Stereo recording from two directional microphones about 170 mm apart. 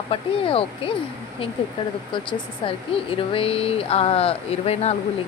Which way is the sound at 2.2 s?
30° left (ahead or behind).